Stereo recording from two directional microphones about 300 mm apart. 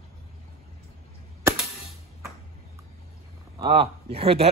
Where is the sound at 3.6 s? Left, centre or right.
Centre.